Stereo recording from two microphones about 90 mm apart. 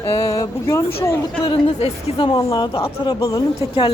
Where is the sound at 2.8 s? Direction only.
90° left.